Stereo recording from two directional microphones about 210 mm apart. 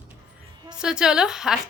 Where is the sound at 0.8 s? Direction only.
5° right (ahead or behind).